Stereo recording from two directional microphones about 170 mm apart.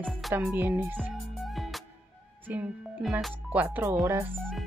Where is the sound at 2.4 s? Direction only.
10° right (ahead or behind).